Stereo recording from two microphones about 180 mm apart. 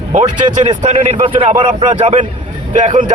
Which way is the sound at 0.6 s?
40° right (ahead or behind).